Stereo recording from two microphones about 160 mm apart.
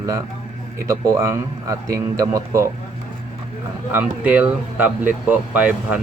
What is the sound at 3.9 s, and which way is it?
Speech, 10° right (ahead or behind).